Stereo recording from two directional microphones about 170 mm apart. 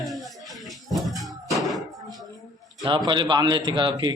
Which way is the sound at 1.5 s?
Centre (ahead or behind).